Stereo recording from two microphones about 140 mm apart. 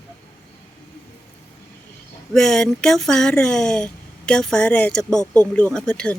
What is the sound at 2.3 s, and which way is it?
Speech, 5° left (ahead or behind).